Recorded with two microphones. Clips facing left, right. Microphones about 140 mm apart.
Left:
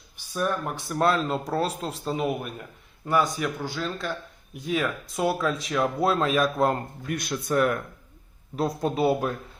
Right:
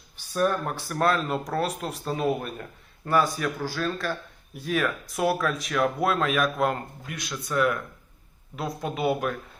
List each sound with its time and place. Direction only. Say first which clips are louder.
0.2 s speech: right 3 dB; 10° left (ahead or behind)
0.9 s speech: left 1 dB; 25° left (ahead or behind)
7.1 s speech: left 5 dB; 50° left (ahead or behind); by 9.3 s 35° left (ahead or behind)